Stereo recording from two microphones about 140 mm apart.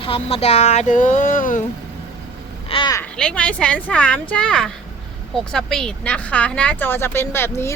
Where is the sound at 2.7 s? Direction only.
40° left (ahead or behind).